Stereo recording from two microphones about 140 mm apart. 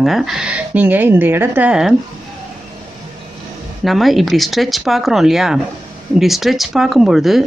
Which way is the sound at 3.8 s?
Centre (ahead or behind).